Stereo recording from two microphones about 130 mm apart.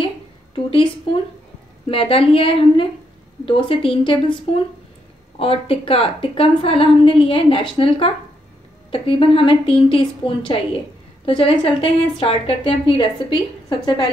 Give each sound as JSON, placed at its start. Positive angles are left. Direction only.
{"t": 1.9, "sound": "a woman's voice", "side_deg": 45}
{"t": 5.4, "sound": "a woman's voice", "side_deg": 45}